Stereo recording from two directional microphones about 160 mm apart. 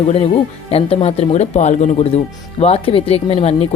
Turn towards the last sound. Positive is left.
turn(degrees=40)  # may be behind; listen again after turning